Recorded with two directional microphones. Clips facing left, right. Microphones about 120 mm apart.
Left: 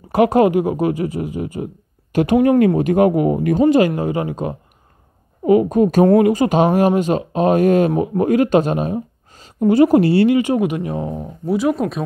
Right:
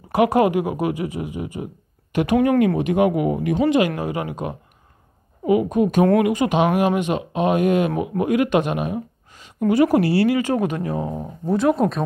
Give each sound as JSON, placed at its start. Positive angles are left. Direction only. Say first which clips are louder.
{"t": 0.1, "sound": "speech", "louder": "left 3 dB", "side_deg": 30}
{"t": 2.8, "sound": "speech", "louder": "left 4 dB", "side_deg": 40}
{"t": 5.5, "sound": "speech", "louder": "left 4 dB", "side_deg": 40}
{"t": 11.4, "sound": "speech", "louder": "even", "side_deg": 5}